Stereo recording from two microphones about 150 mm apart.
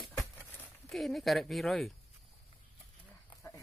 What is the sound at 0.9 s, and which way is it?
A woman's voice, centre (ahead or behind).